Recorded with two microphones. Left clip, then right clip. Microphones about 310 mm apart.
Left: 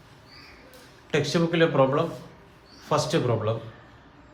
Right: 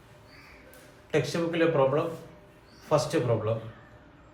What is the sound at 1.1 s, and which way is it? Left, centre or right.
Speech, left.